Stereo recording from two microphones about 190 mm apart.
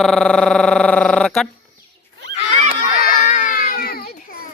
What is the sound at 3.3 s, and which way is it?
Baby cry, 45° left (ahead or behind).